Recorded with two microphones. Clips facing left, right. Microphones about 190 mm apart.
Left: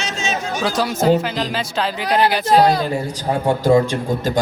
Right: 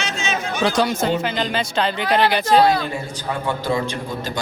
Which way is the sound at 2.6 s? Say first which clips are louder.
Left 2 dB; 40° left (ahead or behind).